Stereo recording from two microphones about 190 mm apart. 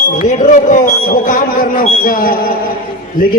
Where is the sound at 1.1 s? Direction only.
45° left (ahead or behind).